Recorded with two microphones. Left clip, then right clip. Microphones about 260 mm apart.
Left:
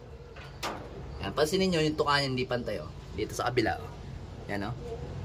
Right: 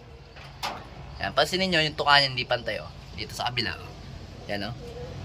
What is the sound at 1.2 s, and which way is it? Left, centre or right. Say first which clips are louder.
A man's voice: right 3 dB; centre.